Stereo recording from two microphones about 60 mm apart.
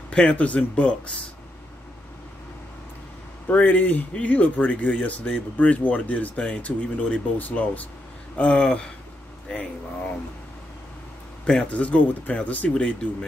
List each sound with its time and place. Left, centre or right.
0.1 s speech: left
3.4 s speech: left
11.7 s speech: left